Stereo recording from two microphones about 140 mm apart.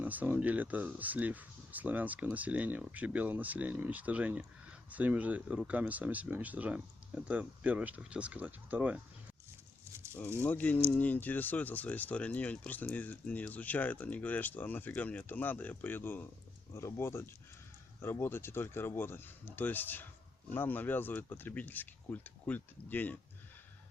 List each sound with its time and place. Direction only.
0.0 s speech: 10° right (ahead or behind)
10.4 s speech: 10° left (ahead or behind)